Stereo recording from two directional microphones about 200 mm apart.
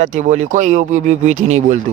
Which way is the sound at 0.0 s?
40° right (ahead or behind).